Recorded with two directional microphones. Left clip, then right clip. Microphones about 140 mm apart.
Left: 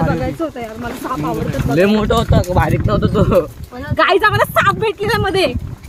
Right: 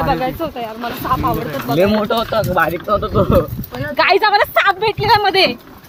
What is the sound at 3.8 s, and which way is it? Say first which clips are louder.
Speech: even; 80° left.